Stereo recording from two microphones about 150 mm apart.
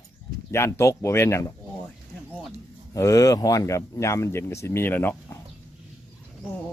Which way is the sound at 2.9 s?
20° left (ahead or behind).